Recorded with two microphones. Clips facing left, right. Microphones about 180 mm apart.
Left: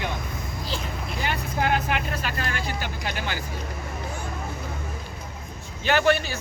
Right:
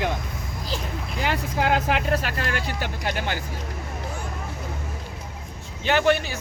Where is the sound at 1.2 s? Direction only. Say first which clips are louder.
Right 2 dB; 90° right; by 2.6 s 75° right (ahead or behind).